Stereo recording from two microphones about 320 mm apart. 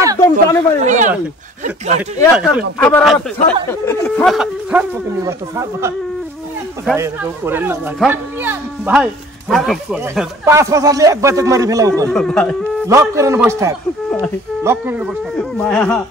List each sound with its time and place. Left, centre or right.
0.2 s speech: centre
0.8 s a sound: right
1.6 s speech: right
2.8 s speech: centre
7.0 s speech: centre
12.1 s speech: centre
12.8 s speech: centre